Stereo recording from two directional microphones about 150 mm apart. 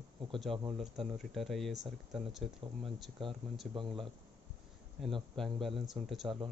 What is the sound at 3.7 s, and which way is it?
Speech, 35° right (ahead or behind).